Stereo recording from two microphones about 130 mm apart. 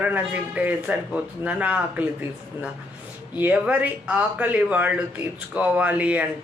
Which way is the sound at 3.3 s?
10° right (ahead or behind).